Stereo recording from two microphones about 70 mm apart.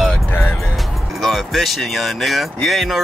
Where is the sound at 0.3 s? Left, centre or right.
Left.